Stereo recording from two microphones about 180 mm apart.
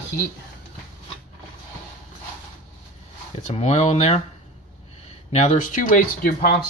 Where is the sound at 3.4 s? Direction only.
35° left (ahead or behind).